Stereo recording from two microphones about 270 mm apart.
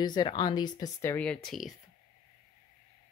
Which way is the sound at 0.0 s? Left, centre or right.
Centre.